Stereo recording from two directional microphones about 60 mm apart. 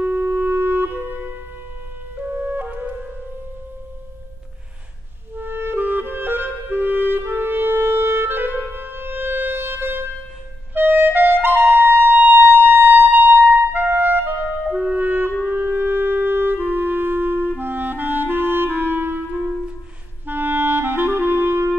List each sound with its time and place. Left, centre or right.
0.0 s music: right
2.3 s music: right
5.3 s clarinet: right
10.7 s music: right
14.7 s music: right
15.4 s clarinet: right
20.2 s clarinet: right